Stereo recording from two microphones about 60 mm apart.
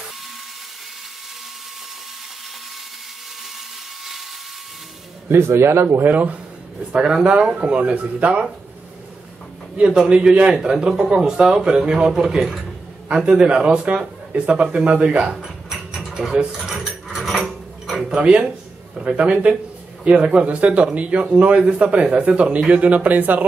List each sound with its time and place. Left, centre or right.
5.3 s speech: right
6.1 s speech: right
6.9 s speech: centre
9.8 s a man's voice: centre
15.3 s mechanisms: centre
18.0 s a man's voice: centre